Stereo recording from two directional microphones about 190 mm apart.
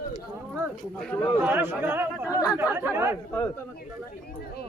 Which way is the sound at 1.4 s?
10° right (ahead or behind).